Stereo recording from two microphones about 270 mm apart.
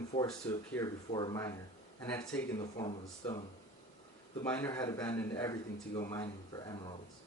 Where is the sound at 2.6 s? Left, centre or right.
Centre.